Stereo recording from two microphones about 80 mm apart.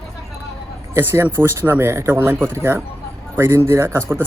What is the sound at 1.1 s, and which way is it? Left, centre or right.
A man's voice, right.